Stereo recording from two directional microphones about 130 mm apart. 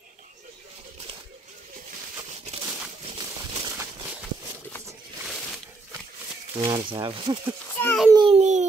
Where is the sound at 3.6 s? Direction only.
20° right (ahead or behind).